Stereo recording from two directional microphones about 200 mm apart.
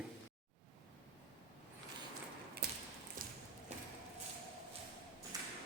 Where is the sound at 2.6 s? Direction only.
50° right (ahead or behind).